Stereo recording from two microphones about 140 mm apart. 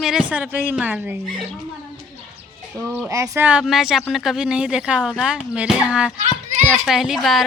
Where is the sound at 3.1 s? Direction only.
20° right (ahead or behind); by 7.4 s centre (ahead or behind).